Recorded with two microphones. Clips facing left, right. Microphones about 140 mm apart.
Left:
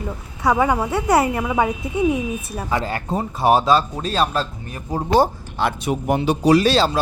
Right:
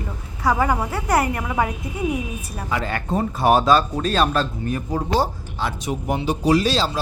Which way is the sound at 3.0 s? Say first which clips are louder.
Right 1 dB; 10° left (ahead or behind).